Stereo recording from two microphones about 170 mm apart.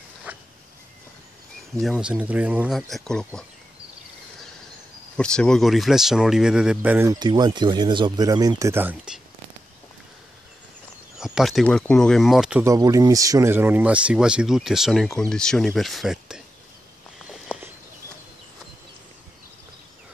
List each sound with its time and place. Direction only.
0.3 s a sound: 10° right (ahead or behind)
1.8 s speech: 5° right (ahead or behind)
2.9 s speech: 5° left (ahead or behind)
5.1 s speech: 5° left (ahead or behind)
7.1 s speech: 25° right (ahead or behind); by 9.2 s 5° right (ahead or behind)
11.1 s speech: 5° right (ahead or behind)
12.6 s speech: 20° right (ahead or behind); by 16.4 s 5° right (ahead or behind)
17.3 s a sound: centre (ahead or behind)